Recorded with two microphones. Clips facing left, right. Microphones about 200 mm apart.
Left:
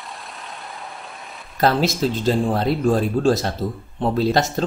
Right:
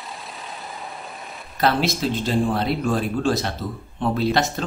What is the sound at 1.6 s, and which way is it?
Speech, 40° left (ahead or behind).